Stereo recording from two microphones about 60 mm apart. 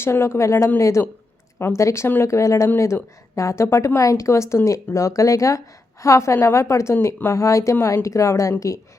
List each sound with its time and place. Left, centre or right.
0.0 s a woman's voice: left
1.5 s speech: left
2.2 s a woman's voice: left